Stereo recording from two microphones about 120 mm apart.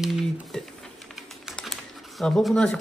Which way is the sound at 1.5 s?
Centre (ahead or behind).